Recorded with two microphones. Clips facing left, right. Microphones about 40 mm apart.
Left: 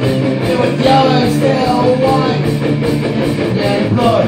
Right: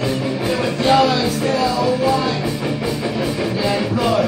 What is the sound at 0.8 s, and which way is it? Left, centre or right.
Music, centre.